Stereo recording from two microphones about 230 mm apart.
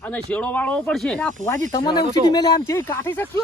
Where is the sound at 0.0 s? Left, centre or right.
Centre.